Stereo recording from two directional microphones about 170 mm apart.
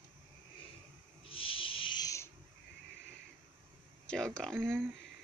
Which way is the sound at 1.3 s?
30° left (ahead or behind).